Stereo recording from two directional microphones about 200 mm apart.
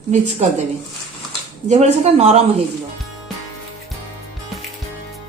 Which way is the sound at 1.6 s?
35° right (ahead or behind).